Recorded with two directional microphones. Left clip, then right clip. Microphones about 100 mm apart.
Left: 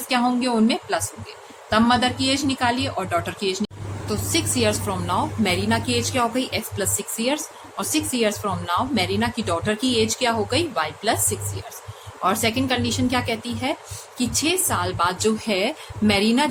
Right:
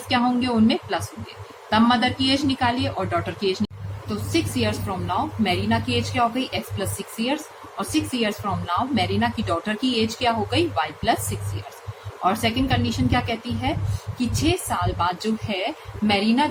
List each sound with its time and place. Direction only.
0.1 s a woman's voice: 35° left (ahead or behind)
4.3 s a woman's voice: 55° left (ahead or behind)
12.2 s a woman's voice: 55° left (ahead or behind); by 16.5 s 90° left